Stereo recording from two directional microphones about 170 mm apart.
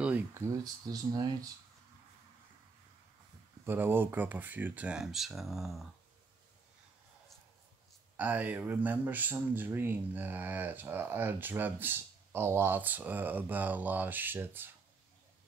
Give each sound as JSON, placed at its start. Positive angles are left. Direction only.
{"t": 0.0, "sound": "speech", "side_deg": -10}
{"t": 3.6, "sound": "speech", "side_deg": -10}
{"t": 8.2, "sound": "speech", "side_deg": -10}